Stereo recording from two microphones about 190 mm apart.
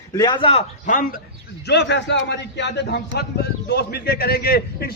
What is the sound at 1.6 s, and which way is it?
A man's voice, 60° left (ahead or behind).